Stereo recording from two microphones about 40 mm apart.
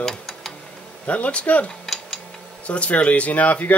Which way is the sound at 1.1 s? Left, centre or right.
Left.